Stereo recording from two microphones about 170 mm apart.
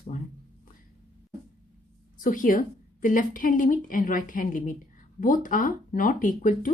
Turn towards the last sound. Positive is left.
turn(degrees=50)  # may be behind; listen again after turning